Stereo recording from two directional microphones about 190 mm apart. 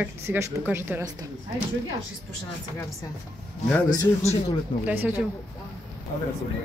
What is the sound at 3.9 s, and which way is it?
Speech, 20° left (ahead or behind).